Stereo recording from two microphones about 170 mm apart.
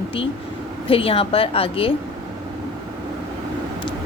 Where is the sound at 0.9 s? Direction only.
35° left (ahead or behind).